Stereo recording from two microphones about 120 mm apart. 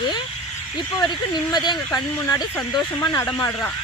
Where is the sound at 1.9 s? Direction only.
20° left (ahead or behind).